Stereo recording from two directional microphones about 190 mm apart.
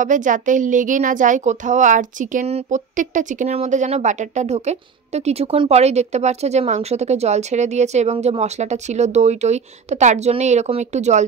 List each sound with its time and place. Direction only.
0.0 s a woman's voice: 40° right (ahead or behind)